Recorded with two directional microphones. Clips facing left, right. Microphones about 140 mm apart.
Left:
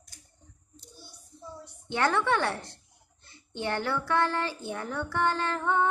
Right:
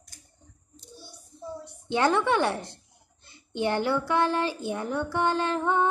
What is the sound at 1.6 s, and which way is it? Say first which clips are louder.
A woman's voice: right 3 dB; 20° right (ahead or behind).